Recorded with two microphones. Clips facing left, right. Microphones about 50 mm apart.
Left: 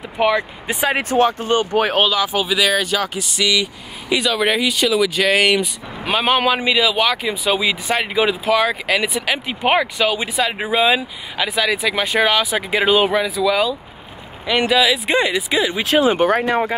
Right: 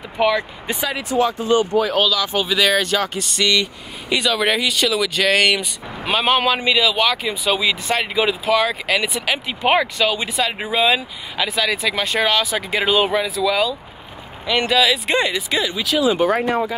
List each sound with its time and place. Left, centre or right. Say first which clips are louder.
0.2 s speech: left 1 dB; centre
0.7 s speech: left 4 dB; left
2.2 s speech: even; centre
13.1 s speech: left 2 dB; centre
15.8 s speech: left 2 dB; left